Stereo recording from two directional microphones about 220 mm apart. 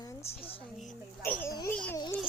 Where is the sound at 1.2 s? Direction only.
10° left (ahead or behind).